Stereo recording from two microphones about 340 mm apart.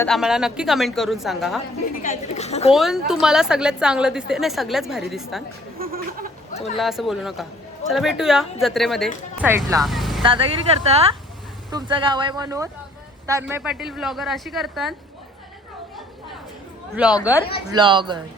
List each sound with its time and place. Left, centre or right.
0.0 s a woman's voice: centre
2.0 s a woman's voice: left
2.7 s a woman's voice: centre
5.8 s a sound: right
6.7 s a woman's voice: centre
9.8 s vehicle: centre
10.2 s a woman's voice: centre
16.9 s a woman's voice: centre
17.7 s speech: centre